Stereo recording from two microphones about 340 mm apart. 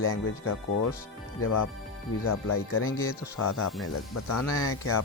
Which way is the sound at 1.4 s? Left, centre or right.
Left.